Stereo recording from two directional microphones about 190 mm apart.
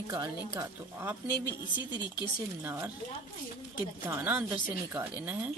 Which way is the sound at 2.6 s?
10° right (ahead or behind).